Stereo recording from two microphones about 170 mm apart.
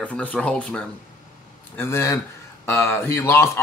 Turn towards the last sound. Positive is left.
turn(degrees=15)  # may be behind; listen again after turning